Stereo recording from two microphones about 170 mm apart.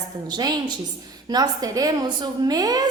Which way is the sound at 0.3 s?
25° right (ahead or behind).